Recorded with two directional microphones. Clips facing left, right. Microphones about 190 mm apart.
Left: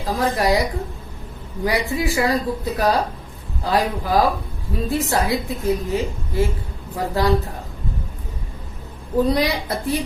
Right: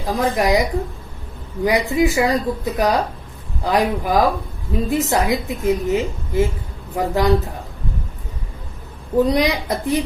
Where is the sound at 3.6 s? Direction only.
20° right (ahead or behind).